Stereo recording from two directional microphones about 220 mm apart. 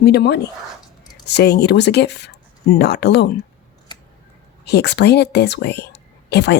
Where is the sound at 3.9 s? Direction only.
20° left (ahead or behind).